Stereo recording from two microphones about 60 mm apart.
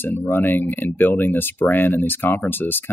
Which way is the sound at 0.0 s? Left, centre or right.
Left.